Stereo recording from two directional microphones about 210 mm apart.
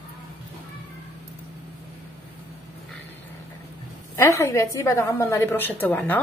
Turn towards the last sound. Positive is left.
turn(degrees=10)  # may be behind; listen again after turning